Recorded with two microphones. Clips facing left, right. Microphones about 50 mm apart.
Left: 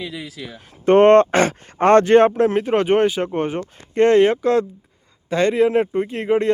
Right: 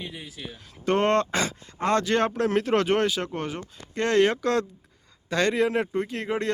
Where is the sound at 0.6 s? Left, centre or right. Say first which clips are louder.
Left 11 dB; left.